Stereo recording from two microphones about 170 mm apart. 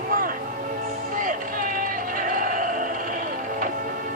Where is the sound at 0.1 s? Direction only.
55° right (ahead or behind).